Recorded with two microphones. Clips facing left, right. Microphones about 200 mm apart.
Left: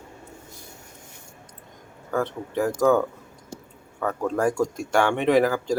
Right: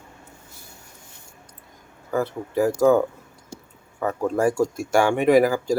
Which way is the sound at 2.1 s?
5° right (ahead or behind).